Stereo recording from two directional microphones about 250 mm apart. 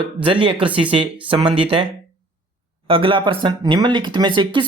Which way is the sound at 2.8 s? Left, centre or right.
Right.